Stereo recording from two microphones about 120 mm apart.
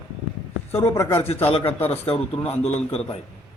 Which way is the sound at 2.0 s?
55° left (ahead or behind).